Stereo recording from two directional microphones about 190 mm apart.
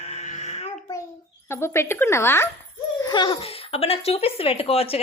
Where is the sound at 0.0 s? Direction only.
35° left (ahead or behind).